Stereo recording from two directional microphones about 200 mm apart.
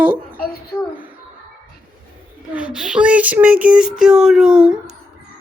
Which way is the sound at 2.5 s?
5° right (ahead or behind).